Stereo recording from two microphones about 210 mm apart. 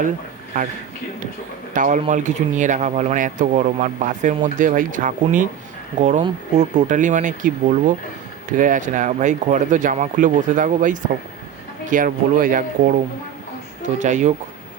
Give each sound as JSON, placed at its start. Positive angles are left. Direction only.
{"t": 1.7, "sound": "speech", "side_deg": -40}
{"t": 14.0, "sound": "speech", "side_deg": -35}